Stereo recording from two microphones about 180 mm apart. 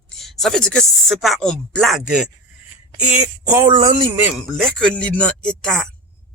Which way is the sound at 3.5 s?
20° right (ahead or behind).